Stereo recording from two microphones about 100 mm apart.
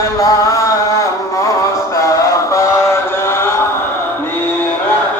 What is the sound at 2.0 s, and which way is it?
Mantra, 35° left (ahead or behind).